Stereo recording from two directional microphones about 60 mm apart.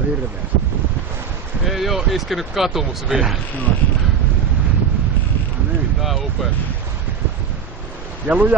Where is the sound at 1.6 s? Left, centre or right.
Centre.